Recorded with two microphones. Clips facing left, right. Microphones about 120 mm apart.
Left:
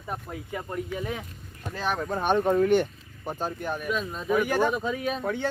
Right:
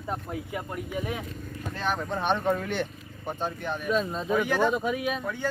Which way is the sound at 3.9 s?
30° right (ahead or behind).